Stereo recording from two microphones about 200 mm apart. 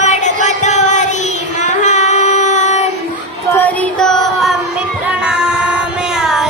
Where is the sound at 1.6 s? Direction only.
35° left (ahead or behind).